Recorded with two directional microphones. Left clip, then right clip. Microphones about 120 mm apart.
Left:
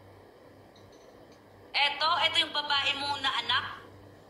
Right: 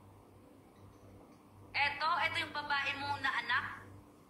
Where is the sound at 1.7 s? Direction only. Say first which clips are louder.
Left 6 dB; 20° left (ahead or behind).